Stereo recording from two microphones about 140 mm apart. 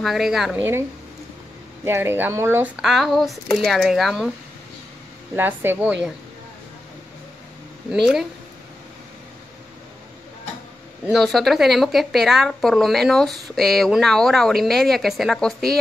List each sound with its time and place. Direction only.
0.0 s a woman's voice: centre (ahead or behind)
0.6 s a woman's voice: 15° right (ahead or behind)
1.9 s a woman's voice: 15° right (ahead or behind)
5.3 s a woman's voice: 15° right (ahead or behind)
7.9 s a woman's voice: 5° right (ahead or behind)
11.1 s a woman's voice: centre (ahead or behind)